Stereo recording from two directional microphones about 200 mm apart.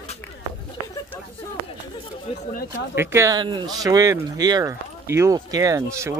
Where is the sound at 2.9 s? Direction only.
10° right (ahead or behind).